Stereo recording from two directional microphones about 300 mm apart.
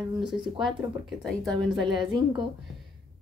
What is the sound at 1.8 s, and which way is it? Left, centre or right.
Speech, centre.